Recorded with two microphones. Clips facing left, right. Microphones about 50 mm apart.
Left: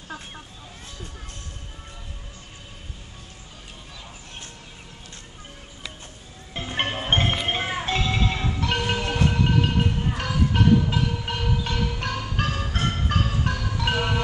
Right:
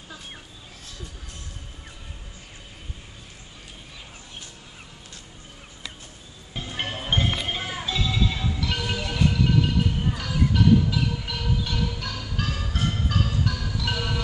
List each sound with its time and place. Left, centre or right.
6.5 s music: left
7.1 s music: left
12.7 s marimba: left